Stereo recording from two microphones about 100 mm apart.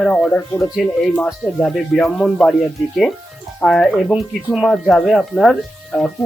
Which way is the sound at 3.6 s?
5° left (ahead or behind).